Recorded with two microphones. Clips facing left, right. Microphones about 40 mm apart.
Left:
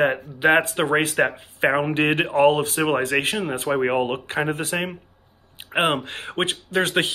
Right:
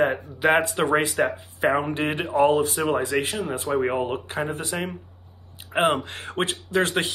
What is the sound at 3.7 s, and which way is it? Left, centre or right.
Speech, left.